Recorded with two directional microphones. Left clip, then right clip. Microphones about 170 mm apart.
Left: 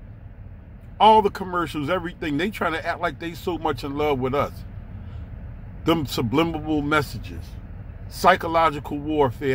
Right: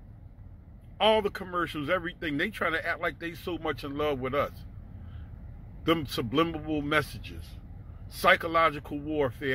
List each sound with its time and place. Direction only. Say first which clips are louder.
0.9 s speech: left 9 dB; 30° left (ahead or behind)
5.9 s a man's voice: left 5 dB; 30° left (ahead or behind)